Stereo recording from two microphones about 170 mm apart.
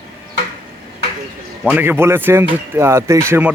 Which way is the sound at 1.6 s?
10° right (ahead or behind).